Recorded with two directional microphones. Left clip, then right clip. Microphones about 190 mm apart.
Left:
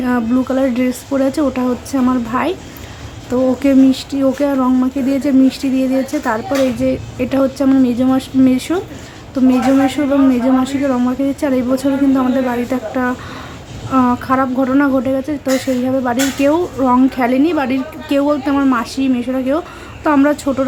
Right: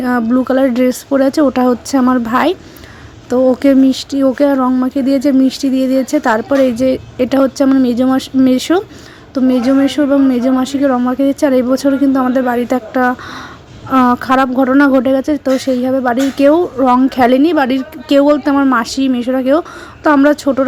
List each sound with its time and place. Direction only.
0.0 s a woman's voice: 35° right (ahead or behind)